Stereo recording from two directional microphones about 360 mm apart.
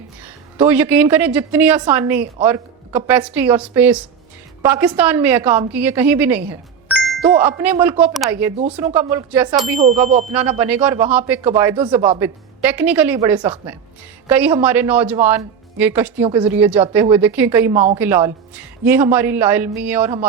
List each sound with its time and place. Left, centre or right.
0.6 s a woman's voice: centre
9.8 s a woman's voice: centre